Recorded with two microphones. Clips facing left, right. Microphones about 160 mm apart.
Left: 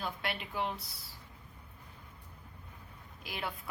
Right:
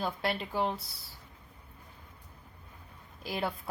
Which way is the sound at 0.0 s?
35° right (ahead or behind).